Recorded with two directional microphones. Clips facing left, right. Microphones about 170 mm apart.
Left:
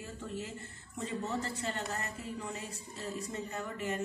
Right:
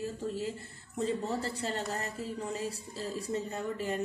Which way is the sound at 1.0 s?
35° right (ahead or behind).